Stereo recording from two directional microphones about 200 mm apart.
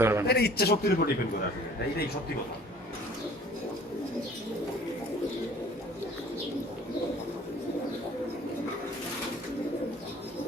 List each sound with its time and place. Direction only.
0.0 s a man's voice: 10° right (ahead or behind)
0.3 s a man's voice: 55° left (ahead or behind)